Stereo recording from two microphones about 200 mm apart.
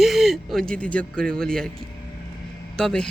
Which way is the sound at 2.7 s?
5° left (ahead or behind).